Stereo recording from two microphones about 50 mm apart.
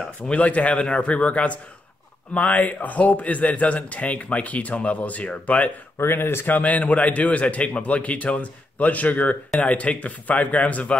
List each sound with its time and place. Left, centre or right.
0.3 s a man's voice: left
5.9 s speech: left
6.5 s a man's voice: left